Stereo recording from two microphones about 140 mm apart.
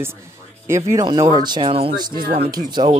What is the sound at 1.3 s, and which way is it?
Speech, 30° right (ahead or behind).